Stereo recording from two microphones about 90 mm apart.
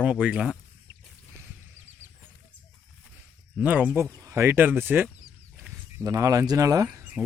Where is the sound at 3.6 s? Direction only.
20° right (ahead or behind).